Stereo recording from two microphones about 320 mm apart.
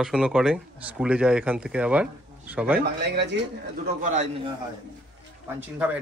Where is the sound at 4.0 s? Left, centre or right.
Right.